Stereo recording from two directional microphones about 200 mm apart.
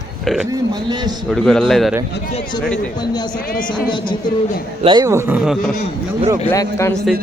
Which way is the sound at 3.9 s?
25° left (ahead or behind).